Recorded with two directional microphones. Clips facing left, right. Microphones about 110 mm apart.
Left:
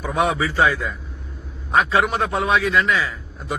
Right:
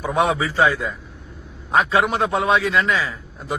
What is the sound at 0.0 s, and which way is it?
A man's voice, 30° right (ahead or behind).